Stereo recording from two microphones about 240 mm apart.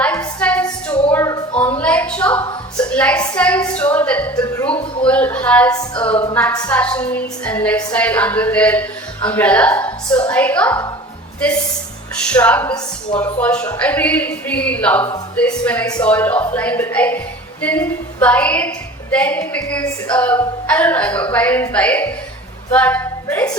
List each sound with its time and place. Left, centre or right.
0.0 s a sound: centre
2.9 s speech: centre
12.3 s speech: centre